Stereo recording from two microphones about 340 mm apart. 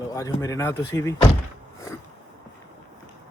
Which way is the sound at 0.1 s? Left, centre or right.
Centre.